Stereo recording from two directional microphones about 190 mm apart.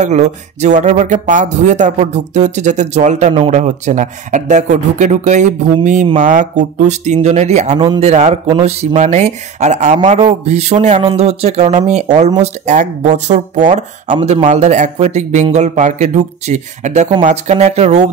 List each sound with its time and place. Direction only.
0.0 s speech: 40° right (ahead or behind)